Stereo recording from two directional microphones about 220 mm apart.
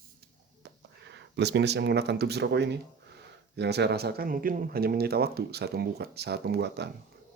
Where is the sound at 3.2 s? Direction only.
50° right (ahead or behind).